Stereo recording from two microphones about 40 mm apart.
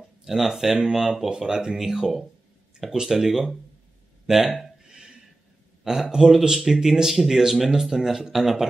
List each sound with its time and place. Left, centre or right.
0.2 s speech: centre
1.3 s speech: centre
4.6 s a sound: centre
6.1 s speech: centre